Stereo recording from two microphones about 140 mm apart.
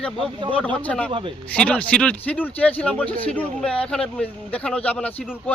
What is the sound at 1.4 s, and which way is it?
A man's voice, 10° left (ahead or behind).